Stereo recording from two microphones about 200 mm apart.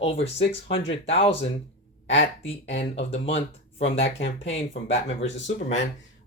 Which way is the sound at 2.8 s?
30° left (ahead or behind).